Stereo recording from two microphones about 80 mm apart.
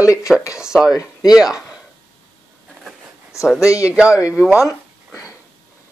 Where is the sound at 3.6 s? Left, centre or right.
Left.